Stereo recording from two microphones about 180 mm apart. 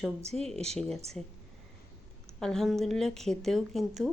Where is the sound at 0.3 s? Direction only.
35° right (ahead or behind).